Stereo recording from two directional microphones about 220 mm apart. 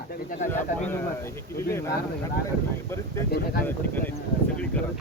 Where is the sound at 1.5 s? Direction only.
10° left (ahead or behind).